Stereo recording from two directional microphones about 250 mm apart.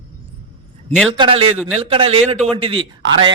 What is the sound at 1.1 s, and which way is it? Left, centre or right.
A man's voice, right.